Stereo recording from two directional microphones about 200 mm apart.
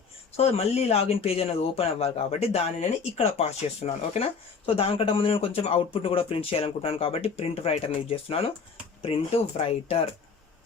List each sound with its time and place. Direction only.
0.3 s speech: 30° left (ahead or behind)